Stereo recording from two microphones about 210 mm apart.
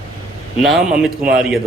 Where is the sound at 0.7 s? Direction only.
Centre (ahead or behind).